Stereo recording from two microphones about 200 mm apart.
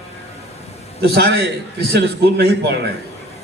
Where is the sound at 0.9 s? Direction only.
55° right (ahead or behind).